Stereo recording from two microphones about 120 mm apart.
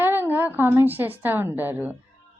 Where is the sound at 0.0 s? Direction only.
15° right (ahead or behind).